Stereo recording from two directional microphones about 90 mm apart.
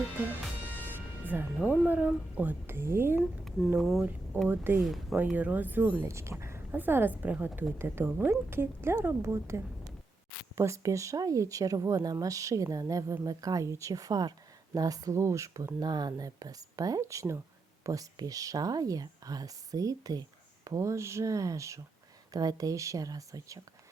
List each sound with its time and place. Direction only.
1.5 s a woman's voice: 10° right (ahead or behind); by 3.2 s 25° right (ahead or behind)
3.2 s speech: centre (ahead or behind)
4.4 s a woman's voice: 25° right (ahead or behind)
6.1 s a woman's voice: 30° right (ahead or behind)
15.8 s speech: 50° right (ahead or behind)